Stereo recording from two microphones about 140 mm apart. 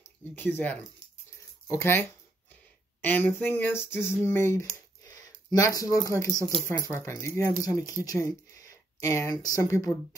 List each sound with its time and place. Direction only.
0.4 s a sound: 15° left (ahead or behind)
5.0 s speech: 25° left (ahead or behind)
6.3 s speech: 30° right (ahead or behind)
6.6 s speech: 20° left (ahead or behind)